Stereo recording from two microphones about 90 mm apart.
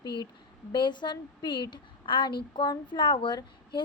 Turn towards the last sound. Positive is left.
turn(degrees=60)  # may be behind; listen again after turning